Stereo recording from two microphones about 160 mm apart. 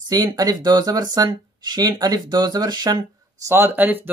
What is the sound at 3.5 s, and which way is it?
Speech, 15° right (ahead or behind).